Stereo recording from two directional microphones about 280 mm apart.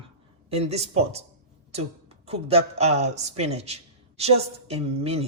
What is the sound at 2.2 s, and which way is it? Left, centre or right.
A man's voice, right.